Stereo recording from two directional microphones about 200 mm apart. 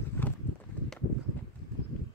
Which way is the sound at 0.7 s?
10° left (ahead or behind).